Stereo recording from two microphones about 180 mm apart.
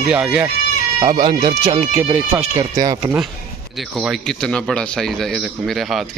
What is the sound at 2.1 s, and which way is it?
Speech, 10° right (ahead or behind).